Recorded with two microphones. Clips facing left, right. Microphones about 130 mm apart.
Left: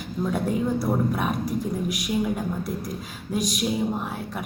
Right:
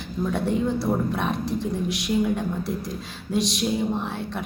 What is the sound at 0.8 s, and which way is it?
Speech, 10° left (ahead or behind).